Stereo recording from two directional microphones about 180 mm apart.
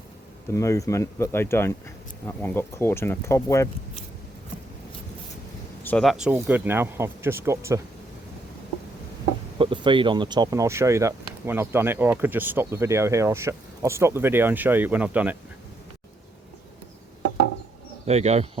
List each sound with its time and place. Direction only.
0.5 s speech: 15° left (ahead or behind)
5.8 s speech: 5° left (ahead or behind); by 7.8 s 15° right (ahead or behind)
9.6 s speech: 30° right (ahead or behind); by 15.4 s 10° right (ahead or behind)
18.0 s speech: 35° right (ahead or behind)